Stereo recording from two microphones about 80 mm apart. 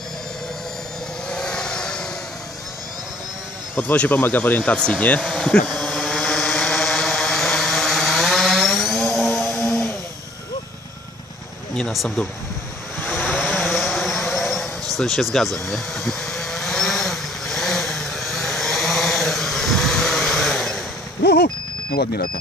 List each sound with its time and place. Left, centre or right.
1.3 s vehicle: centre
3.7 s speech: centre
5.2 s vehicle: centre
13.0 s vehicle: left
13.3 s vehicle: centre
15.0 s speech: centre
15.3 s vehicle: centre